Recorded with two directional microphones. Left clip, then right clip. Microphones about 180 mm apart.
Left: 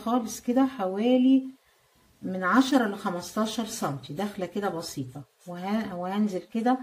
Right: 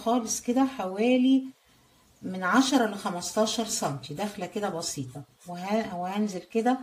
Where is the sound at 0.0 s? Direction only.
25° right (ahead or behind).